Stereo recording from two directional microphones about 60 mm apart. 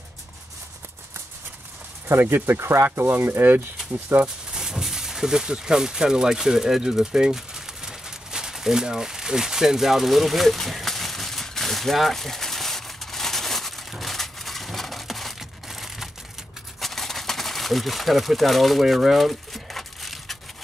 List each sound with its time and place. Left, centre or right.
2.0 s speech: right
3.1 s speech: right
4.6 s a sound: centre